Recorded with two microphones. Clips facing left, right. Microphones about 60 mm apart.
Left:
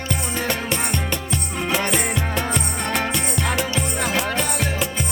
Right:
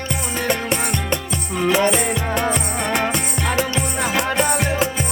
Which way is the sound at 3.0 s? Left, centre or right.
Centre.